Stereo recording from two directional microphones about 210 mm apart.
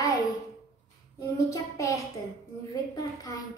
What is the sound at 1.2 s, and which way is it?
A woman's voice, 15° left (ahead or behind).